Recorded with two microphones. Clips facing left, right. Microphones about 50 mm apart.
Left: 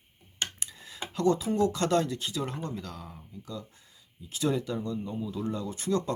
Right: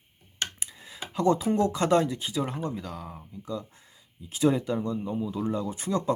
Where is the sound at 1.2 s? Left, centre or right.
Right.